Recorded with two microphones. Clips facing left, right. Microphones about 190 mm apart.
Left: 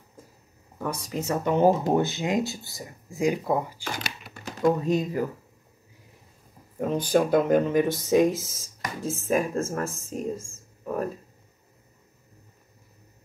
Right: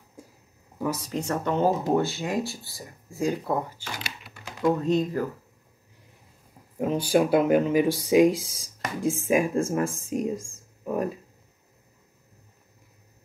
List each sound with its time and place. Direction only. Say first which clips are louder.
0.7 s speech: right 2 dB; 5° right (ahead or behind); by 3.8 s 15° left (ahead or behind)
4.0 s typing: left 3 dB; 40° left (ahead or behind)
4.7 s speech: right 1 dB; 10° left (ahead or behind)
6.8 s speech: right 1 dB; 5° right (ahead or behind)